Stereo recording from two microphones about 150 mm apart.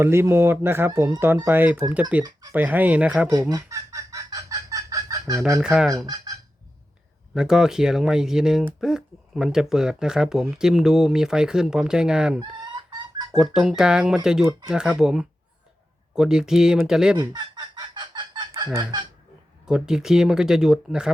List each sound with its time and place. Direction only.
0.0 s speech: 15° right (ahead or behind)
3.5 s chicken: 20° right (ahead or behind)
5.6 s speech: 5° right (ahead or behind)
7.3 s speech: 5° right (ahead or behind)
12.4 s fowl: 30° right (ahead or behind)
13.3 s speech: 5° right (ahead or behind)
17.2 s chicken: 30° right (ahead or behind)
19.6 s speech: 5° right (ahead or behind)